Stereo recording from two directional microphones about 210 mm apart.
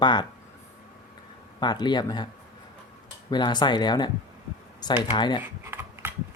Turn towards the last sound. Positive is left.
turn(degrees=-10)  # may be behind; listen again after turning